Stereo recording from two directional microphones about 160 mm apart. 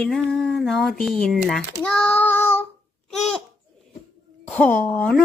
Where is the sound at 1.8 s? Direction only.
5° left (ahead or behind).